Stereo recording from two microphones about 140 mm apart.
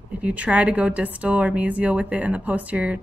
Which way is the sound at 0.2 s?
10° right (ahead or behind).